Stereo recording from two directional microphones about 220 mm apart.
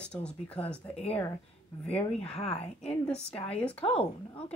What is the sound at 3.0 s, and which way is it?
Speech, 5° left (ahead or behind).